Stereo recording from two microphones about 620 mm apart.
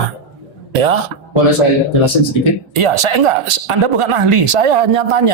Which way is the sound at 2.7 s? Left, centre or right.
Right.